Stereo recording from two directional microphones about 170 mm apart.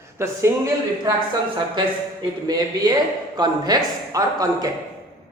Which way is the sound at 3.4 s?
25° right (ahead or behind).